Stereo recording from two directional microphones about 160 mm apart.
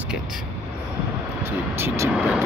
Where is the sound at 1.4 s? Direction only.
15° right (ahead or behind).